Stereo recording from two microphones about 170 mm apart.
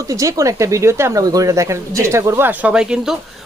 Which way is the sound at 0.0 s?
20° right (ahead or behind).